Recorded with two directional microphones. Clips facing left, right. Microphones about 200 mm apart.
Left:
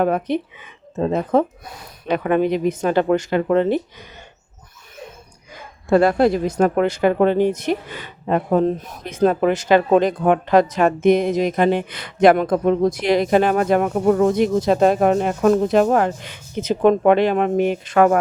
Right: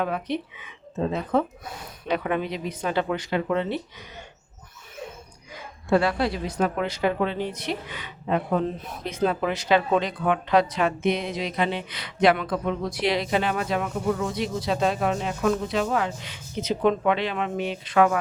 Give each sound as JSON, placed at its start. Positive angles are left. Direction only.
{"t": 0.0, "sound": "speech", "side_deg": 50}
{"t": 5.9, "sound": "speech", "side_deg": 45}